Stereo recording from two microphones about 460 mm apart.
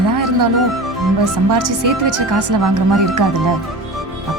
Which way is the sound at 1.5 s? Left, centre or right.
Right.